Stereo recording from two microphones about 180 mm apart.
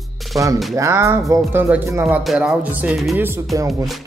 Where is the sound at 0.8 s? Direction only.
15° right (ahead or behind).